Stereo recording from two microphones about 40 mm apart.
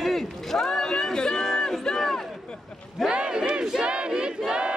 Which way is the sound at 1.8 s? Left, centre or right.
Centre.